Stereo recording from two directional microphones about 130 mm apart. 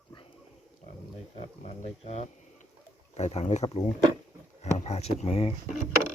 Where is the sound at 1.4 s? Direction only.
55° left (ahead or behind).